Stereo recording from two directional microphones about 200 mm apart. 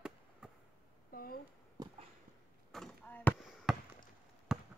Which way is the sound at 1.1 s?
45° left (ahead or behind).